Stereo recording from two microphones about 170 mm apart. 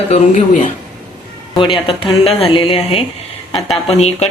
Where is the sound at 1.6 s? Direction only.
30° left (ahead or behind).